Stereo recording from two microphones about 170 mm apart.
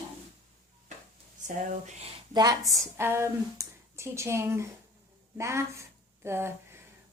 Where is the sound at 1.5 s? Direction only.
45° right (ahead or behind).